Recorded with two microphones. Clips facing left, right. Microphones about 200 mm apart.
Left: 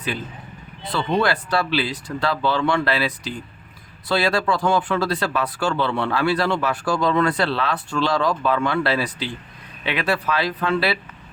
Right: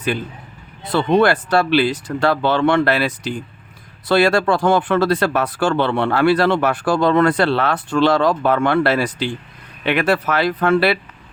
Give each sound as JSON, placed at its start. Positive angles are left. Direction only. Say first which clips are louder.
{"t": 0.9, "sound": "speech", "louder": "right 6 dB", "side_deg": -50}
{"t": 4.1, "sound": "speech", "louder": "right 6 dB", "side_deg": -50}
{"t": 9.0, "sound": "speech", "louder": "right 6 dB", "side_deg": -85}
{"t": 9.8, "sound": "speech", "louder": "right 6 dB", "side_deg": -50}